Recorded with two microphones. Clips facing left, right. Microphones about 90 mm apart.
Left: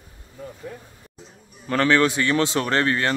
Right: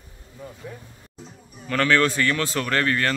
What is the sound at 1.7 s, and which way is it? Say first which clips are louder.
A man's voice: left 2 dB; 20° left (ahead or behind).